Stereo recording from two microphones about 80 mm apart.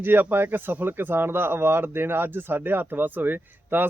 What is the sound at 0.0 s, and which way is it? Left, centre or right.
Speech, right.